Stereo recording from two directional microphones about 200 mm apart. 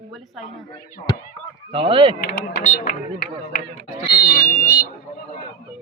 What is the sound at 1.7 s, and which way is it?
Speech, 25° right (ahead or behind).